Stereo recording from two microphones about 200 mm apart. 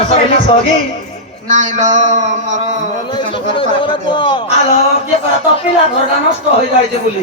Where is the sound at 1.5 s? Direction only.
35° right (ahead or behind).